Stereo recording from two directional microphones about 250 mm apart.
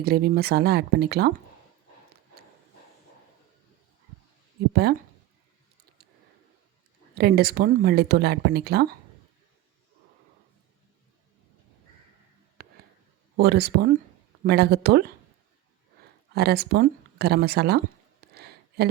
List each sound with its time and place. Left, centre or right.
0.0 s speech: right
4.7 s speech: right
7.2 s speech: right
12.6 s a sound: right
13.3 s speech: right
16.3 s speech: right
18.3 s a sound: right